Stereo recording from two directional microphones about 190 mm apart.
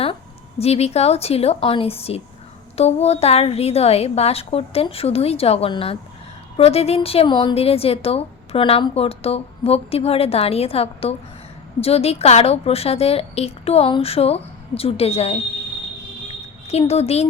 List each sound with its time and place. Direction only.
0.6 s a woman's voice: 35° left (ahead or behind)
16.6 s a woman's voice: 35° left (ahead or behind)